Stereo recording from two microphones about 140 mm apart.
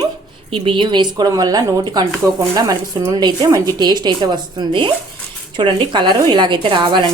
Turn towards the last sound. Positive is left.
turn(degrees=-35)  # may be behind; listen again after turning